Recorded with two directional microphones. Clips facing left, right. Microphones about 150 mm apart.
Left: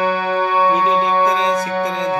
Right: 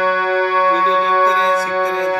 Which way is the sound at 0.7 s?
15° left (ahead or behind).